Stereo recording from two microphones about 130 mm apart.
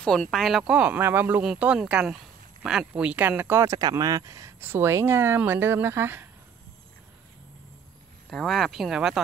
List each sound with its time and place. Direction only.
0.0 s speech: 5° left (ahead or behind); by 6.2 s 20° right (ahead or behind)
8.3 s speech: centre (ahead or behind)